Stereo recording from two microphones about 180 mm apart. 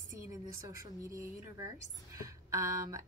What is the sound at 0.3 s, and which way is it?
A woman's voice, 15° right (ahead or behind).